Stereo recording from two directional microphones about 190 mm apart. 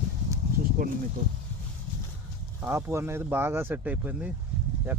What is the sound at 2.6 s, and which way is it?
Speech, 15° right (ahead or behind).